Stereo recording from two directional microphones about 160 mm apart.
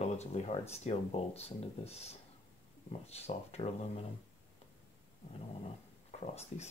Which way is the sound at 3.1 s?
40° left (ahead or behind).